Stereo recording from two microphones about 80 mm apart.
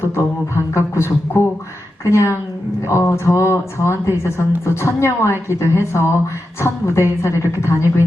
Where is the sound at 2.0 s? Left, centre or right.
Left.